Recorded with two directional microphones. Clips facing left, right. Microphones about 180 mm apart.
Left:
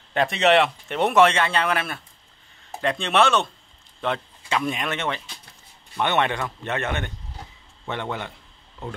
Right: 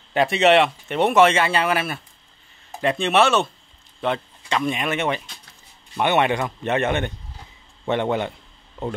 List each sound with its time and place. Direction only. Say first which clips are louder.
0.1 s speech: right 3 dB; 5° right (ahead or behind); by 8.3 s 20° right (ahead or behind)